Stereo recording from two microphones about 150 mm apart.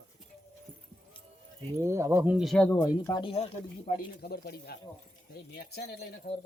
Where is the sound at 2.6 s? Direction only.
15° left (ahead or behind).